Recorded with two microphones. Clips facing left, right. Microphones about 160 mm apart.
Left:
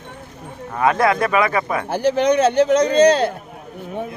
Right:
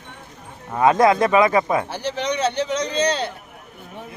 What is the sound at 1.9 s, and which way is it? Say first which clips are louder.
A man's voice: left 8 dB; 50° left (ahead or behind).